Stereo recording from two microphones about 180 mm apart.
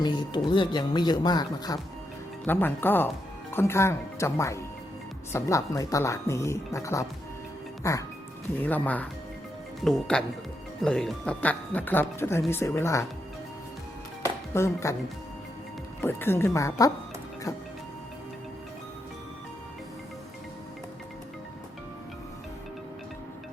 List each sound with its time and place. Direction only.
0.0 s speech: 25° left (ahead or behind)
2.5 s speech: 10° left (ahead or behind)
14.5 s speech: 15° left (ahead or behind)
16.0 s speech: 10° left (ahead or behind)